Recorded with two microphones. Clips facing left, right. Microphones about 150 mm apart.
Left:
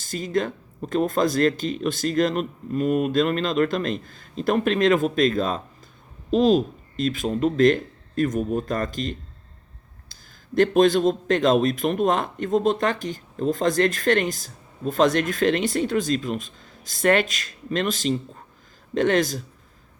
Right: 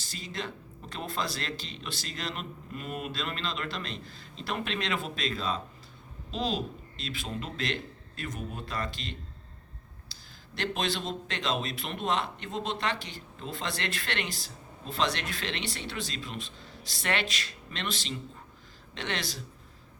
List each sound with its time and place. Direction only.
0.0 s a man's voice: 50° left (ahead or behind)